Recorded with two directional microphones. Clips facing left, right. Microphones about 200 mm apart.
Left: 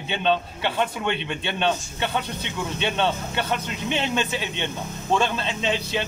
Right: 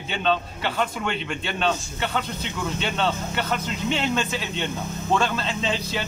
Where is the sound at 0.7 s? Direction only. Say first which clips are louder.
Left 1 dB; 20° left (ahead or behind).